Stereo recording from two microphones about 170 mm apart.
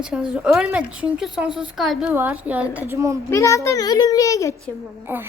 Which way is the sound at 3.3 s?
20° left (ahead or behind).